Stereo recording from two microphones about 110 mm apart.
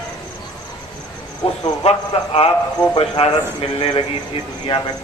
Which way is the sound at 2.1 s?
65° left (ahead or behind).